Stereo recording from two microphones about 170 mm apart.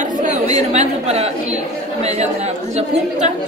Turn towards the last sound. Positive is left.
turn(degrees=-40)  # may be behind; listen again after turning